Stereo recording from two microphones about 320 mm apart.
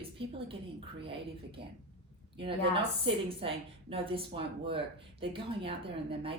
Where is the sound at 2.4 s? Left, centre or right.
Centre.